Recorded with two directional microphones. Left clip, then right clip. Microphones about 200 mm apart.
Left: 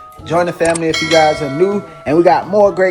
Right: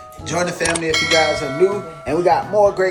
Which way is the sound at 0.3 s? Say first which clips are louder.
Left 6 dB; 20° left (ahead or behind).